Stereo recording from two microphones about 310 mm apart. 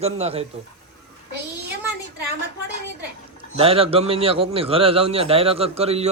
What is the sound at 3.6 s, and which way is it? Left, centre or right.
A man's voice, centre.